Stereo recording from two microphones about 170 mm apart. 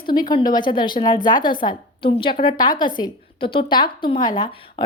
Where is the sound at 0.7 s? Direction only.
30° left (ahead or behind).